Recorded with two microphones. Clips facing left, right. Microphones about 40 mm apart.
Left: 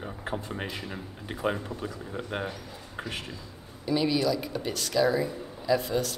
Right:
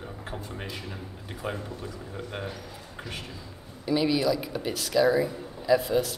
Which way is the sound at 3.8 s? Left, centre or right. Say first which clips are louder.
Right 1 dB; centre.